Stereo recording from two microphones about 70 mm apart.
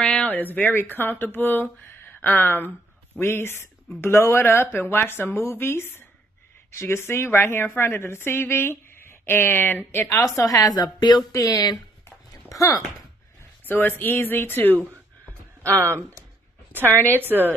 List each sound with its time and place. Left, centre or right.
0.0 s a sound: centre
0.3 s a woman's voice: left
10.1 s speech: left
12.4 s speech: left
13.7 s speech: left
16.7 s a woman's voice: right